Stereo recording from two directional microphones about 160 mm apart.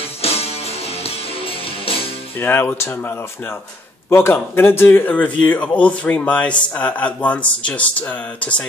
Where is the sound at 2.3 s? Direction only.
15° left (ahead or behind).